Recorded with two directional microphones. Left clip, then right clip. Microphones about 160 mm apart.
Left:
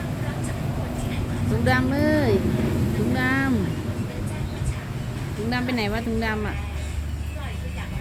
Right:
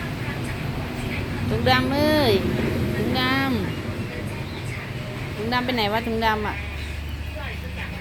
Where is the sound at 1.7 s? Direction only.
30° left (ahead or behind).